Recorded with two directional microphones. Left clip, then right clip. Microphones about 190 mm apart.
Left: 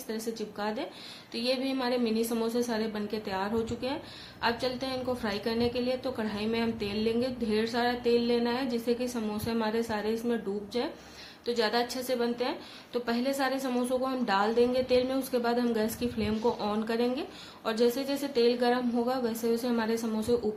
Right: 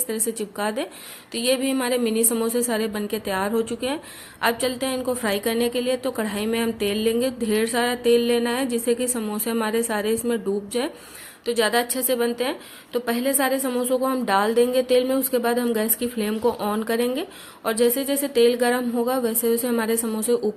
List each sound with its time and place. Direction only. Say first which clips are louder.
0.1 s a woman's voice: right 6 dB; 35° right (ahead or behind)